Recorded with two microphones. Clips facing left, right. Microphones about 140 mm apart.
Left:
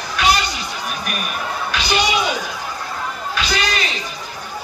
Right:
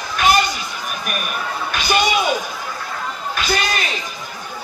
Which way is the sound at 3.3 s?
50° right (ahead or behind).